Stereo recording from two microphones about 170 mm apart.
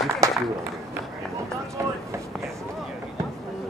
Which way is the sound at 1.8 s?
15° right (ahead or behind).